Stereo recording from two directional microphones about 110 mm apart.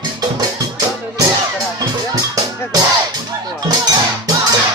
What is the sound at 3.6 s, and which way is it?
Music, 40° right (ahead or behind).